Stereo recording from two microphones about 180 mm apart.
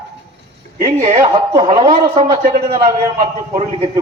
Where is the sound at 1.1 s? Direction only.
30° right (ahead or behind).